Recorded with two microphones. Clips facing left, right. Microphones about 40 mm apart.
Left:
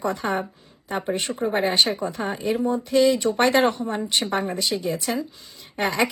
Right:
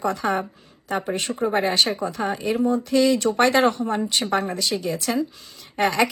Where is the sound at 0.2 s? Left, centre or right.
Centre.